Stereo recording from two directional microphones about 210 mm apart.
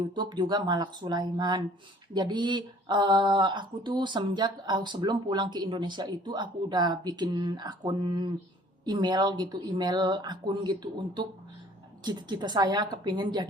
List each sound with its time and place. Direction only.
0.1 s speech: 20° right (ahead or behind)